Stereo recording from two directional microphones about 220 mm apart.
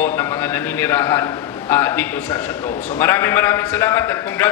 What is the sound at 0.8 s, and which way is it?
A man's voice, 10° left (ahead or behind).